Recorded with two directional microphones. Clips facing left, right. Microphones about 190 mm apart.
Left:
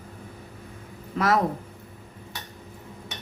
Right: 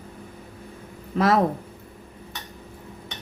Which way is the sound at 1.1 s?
30° right (ahead or behind).